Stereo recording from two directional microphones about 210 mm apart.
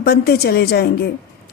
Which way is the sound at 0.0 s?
50° left (ahead or behind).